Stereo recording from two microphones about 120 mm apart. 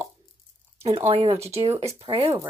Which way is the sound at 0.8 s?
50° right (ahead or behind).